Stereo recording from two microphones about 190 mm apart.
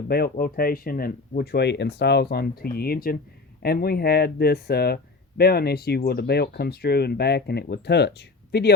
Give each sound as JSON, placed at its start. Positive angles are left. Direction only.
{"t": 0.1, "sound": "speech", "side_deg": 55}